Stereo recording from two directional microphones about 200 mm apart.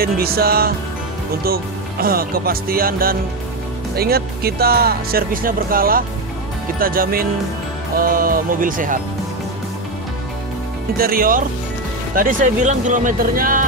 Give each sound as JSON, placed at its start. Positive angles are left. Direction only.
{"t": 0.0, "sound": "speech", "side_deg": -50}
{"t": 11.0, "sound": "speech", "side_deg": -45}